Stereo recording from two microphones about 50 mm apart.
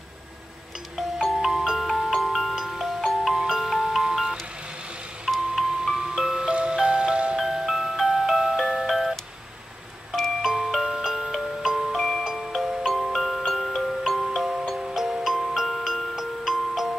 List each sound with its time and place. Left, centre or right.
0.9 s glockenspiel: centre
5.2 s music: centre
7.3 s music: centre
10.4 s glockenspiel: centre
12.4 s music: centre